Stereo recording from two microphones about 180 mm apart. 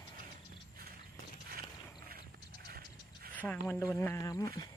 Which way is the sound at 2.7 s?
60° right (ahead or behind).